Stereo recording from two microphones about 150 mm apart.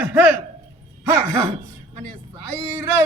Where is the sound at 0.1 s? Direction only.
10° right (ahead or behind).